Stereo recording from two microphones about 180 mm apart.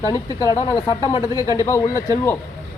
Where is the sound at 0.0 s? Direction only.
15° left (ahead or behind).